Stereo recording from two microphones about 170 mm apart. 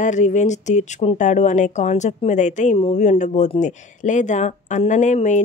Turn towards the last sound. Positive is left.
turn(degrees=45)  # may be behind; listen again after turning